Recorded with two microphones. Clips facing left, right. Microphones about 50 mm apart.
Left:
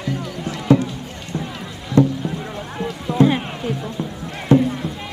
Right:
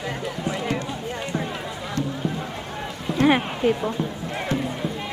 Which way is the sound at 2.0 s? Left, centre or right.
Left.